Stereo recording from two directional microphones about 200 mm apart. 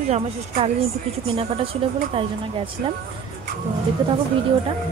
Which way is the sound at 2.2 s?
25° right (ahead or behind).